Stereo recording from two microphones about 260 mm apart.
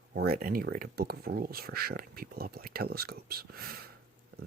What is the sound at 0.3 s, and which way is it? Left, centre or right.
Speech, right.